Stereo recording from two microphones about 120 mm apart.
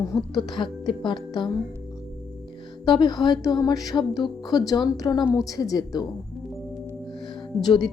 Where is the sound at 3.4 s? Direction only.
30° left (ahead or behind).